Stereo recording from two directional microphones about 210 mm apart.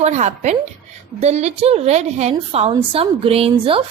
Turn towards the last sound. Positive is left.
turn(degrees=-25)  # may be behind; listen again after turning